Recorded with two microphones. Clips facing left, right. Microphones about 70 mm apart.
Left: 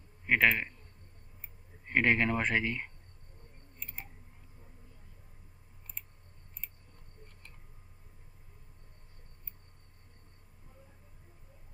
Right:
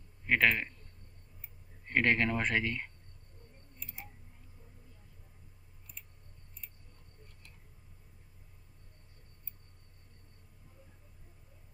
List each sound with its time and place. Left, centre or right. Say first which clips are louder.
0.3 s speech: left 1 dB; centre
1.9 s speech: left 1 dB; centre
3.8 s tick: left 3 dB; left